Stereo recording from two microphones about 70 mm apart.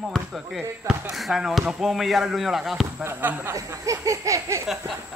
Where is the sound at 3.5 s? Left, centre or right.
Right.